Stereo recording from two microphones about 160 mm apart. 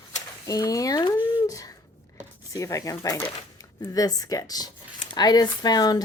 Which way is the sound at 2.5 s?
20° left (ahead or behind).